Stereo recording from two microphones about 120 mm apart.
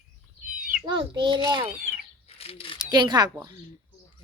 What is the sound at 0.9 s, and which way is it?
Speech, 45° right (ahead or behind).